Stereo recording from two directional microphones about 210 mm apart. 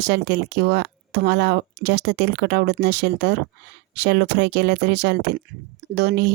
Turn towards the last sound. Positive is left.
turn(degrees=-50)  # may be behind; listen again after turning